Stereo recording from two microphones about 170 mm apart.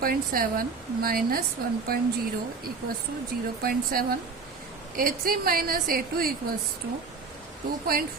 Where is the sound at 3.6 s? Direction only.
60° right (ahead or behind).